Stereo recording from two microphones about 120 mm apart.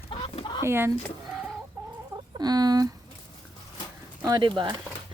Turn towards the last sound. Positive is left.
turn(degrees=-40)  # may be behind; listen again after turning